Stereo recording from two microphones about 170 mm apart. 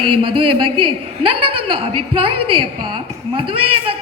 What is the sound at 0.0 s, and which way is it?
A man's voice, 30° right (ahead or behind).